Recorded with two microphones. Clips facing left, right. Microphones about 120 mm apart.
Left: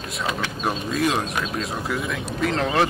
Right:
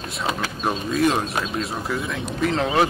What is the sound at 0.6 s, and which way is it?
Speech, centre (ahead or behind).